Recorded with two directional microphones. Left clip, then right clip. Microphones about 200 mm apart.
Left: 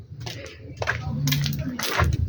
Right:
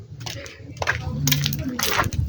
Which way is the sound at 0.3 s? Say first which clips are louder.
Right 2 dB; 50° right (ahead or behind).